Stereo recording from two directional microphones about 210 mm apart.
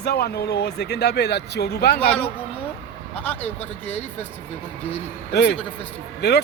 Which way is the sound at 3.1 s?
5° left (ahead or behind).